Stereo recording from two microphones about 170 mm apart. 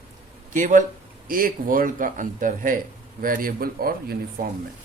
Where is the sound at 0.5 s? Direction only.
50° right (ahead or behind).